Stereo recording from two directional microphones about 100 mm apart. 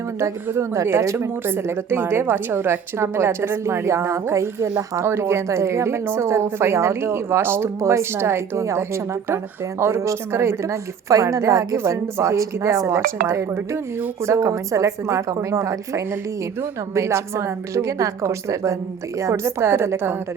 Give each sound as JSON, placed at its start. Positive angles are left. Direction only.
{"t": 0.2, "sound": "a woman's voice", "side_deg": -30}
{"t": 9.8, "sound": "a woman's voice", "side_deg": -30}
{"t": 16.9, "sound": "a woman's voice", "side_deg": -30}